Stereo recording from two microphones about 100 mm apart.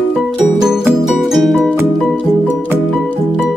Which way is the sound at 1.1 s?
Centre (ahead or behind).